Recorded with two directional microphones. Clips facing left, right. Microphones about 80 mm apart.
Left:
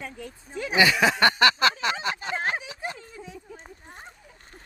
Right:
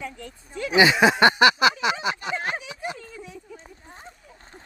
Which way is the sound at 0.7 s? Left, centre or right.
Right.